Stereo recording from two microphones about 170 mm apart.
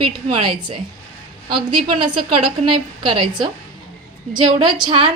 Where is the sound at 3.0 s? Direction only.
30° right (ahead or behind).